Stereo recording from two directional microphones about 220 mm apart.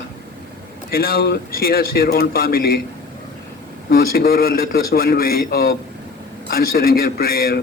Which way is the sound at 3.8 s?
45° left (ahead or behind).